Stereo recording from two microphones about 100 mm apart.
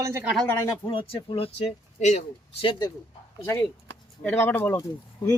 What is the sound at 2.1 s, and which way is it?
Speech, 70° left (ahead or behind).